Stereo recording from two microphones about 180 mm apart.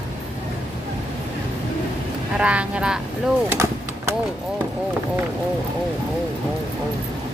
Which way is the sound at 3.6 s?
15° right (ahead or behind).